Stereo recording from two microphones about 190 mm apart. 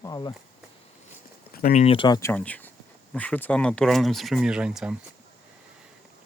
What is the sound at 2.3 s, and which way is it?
Speech, 5° left (ahead or behind).